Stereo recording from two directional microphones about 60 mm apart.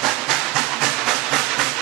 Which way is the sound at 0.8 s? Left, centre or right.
Centre.